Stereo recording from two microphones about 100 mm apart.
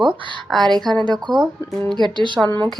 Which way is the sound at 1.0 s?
45° right (ahead or behind).